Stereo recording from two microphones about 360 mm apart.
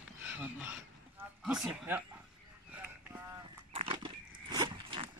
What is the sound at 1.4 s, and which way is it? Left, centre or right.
Speech, centre.